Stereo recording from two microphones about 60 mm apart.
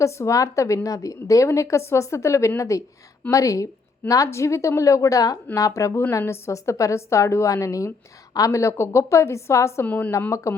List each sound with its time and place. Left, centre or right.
0.0 s a woman's voice: left
4.3 s a woman's voice: left
5.5 s a woman's voice: left
6.1 s a woman's voice: left
9.8 s a woman's voice: left
10.1 s a woman's voice: left